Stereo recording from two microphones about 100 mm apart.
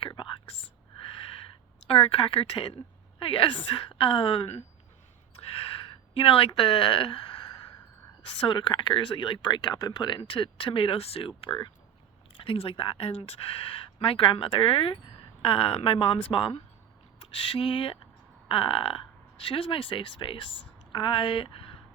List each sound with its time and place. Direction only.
0.0 s whispering: 55° left (ahead or behind)
1.9 s speech: 70° left (ahead or behind)
5.4 s a sound: 80° left
6.1 s speech: 70° left (ahead or behind)
8.4 s speech: 55° left (ahead or behind)
12.3 s speech: 65° left (ahead or behind)